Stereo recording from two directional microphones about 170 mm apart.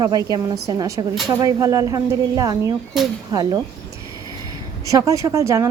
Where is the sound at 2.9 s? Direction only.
Centre (ahead or behind).